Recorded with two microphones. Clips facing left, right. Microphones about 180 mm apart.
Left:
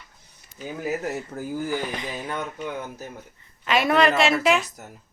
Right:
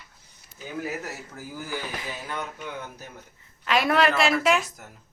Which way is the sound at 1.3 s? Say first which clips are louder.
Left 8 dB; 40° left (ahead or behind).